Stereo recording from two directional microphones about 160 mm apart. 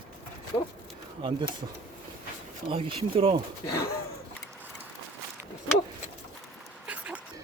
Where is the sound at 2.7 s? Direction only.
35° right (ahead or behind).